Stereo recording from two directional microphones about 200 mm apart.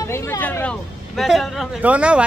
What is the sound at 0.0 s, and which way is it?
A man's voice, 15° left (ahead or behind).